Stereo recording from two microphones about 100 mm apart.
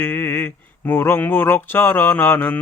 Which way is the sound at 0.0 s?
20° left (ahead or behind).